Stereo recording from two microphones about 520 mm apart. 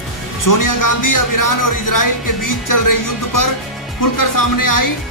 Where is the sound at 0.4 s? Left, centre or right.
Left.